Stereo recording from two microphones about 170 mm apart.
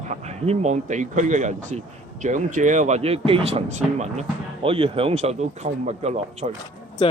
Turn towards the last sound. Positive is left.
turn(degrees=30)  # may be behind; listen again after turning